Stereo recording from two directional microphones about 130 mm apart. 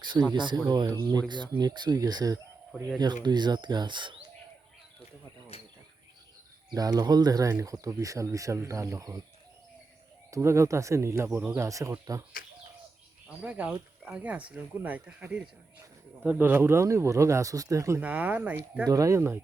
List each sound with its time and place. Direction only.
0.0 s speech: 35° right (ahead or behind)
5.5 s insect: 50° left (ahead or behind)
6.7 s speech: 30° right (ahead or behind)
10.3 s speech: 20° right (ahead or behind)
13.2 s speech: 10° right (ahead or behind)
18.0 s speech: 10° right (ahead or behind)
18.9 s speech: 25° right (ahead or behind)